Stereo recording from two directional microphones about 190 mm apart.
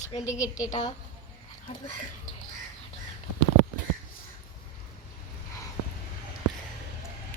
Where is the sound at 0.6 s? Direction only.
20° left (ahead or behind).